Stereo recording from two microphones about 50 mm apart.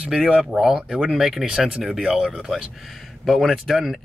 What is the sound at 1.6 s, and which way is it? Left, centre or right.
Speech, centre.